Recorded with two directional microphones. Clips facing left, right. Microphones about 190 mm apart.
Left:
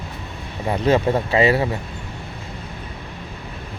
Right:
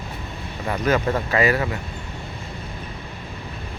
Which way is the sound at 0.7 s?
30° left (ahead or behind).